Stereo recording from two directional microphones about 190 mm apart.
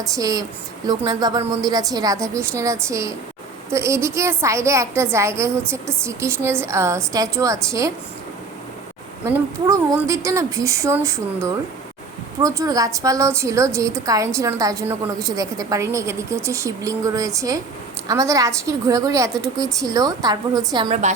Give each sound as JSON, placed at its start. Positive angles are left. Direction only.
{"t": 0.0, "sound": "a woman's voice", "side_deg": -20}
{"t": 9.2, "sound": "a woman's voice", "side_deg": -15}
{"t": 20.9, "sound": "a woman's voice", "side_deg": -40}